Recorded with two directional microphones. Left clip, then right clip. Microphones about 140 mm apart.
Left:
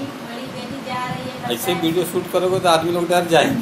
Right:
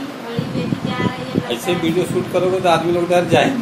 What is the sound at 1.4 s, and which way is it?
A man's voice, 20° left (ahead or behind).